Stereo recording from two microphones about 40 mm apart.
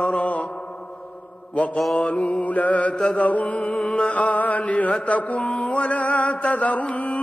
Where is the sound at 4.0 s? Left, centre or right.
Left.